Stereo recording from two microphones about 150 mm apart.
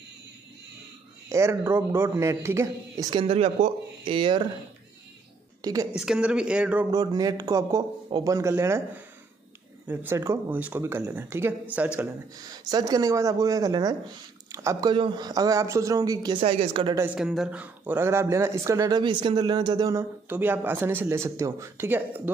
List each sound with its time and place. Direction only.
1.3 s a man's voice: 20° right (ahead or behind); by 4.5 s 35° right (ahead or behind)
5.6 s a woman's voice: 25° right (ahead or behind)
5.9 s speech: 5° right (ahead or behind)
6.9 s a man's voice: 25° right (ahead or behind)
12.6 s a man's voice: 25° right (ahead or behind)
16.4 s speech: 40° right (ahead or behind)
16.9 s speech: 15° right (ahead or behind)
17.2 s speech: 5° right (ahead or behind)